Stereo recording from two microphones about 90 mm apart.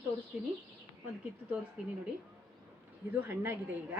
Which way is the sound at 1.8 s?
10° right (ahead or behind).